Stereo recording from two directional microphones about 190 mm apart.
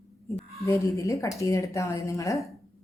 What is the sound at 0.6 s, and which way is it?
A woman's voice, 15° left (ahead or behind).